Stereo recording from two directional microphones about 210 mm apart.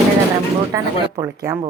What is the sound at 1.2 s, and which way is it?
Speech, 15° right (ahead or behind).